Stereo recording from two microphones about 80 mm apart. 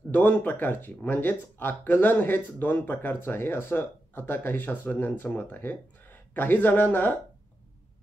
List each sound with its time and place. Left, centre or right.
0.1 s speech: left